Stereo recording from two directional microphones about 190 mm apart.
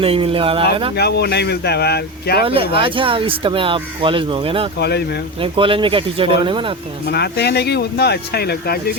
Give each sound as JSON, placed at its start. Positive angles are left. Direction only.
{"t": 0.0, "sound": "speech", "side_deg": -30}
{"t": 0.9, "sound": "speech", "side_deg": 60}
{"t": 2.4, "sound": "speech", "side_deg": -30}
{"t": 4.8, "sound": "speech", "side_deg": 60}
{"t": 5.4, "sound": "speech", "side_deg": -25}
{"t": 7.1, "sound": "speech", "side_deg": 60}